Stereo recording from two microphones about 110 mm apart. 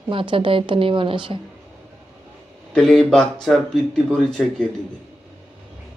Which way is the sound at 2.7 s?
5° left (ahead or behind).